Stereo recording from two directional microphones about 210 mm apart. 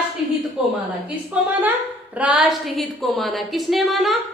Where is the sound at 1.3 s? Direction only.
10° right (ahead or behind).